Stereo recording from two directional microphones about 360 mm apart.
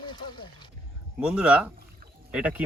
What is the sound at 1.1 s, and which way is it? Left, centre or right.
Speech, centre.